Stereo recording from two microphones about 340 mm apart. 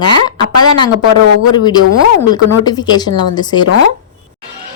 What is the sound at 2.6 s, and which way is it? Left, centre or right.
Speech, centre.